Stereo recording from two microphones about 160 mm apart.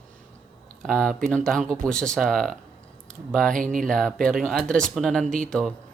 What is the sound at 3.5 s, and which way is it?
Speech, 55° right (ahead or behind).